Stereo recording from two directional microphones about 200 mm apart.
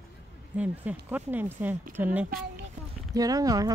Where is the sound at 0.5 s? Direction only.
10° right (ahead or behind).